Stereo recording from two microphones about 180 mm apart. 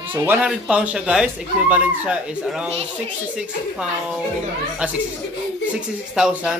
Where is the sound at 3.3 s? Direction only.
5° right (ahead or behind).